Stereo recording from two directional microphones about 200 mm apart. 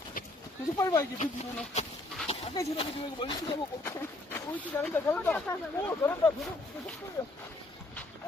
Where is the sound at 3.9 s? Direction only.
10° left (ahead or behind).